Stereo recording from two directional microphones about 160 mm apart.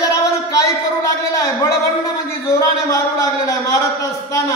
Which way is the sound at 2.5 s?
20° left (ahead or behind).